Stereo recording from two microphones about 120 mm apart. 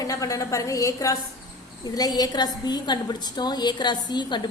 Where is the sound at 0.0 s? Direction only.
30° left (ahead or behind).